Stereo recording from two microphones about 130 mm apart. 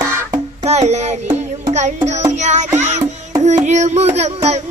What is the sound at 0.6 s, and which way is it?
Music, 55° right (ahead or behind).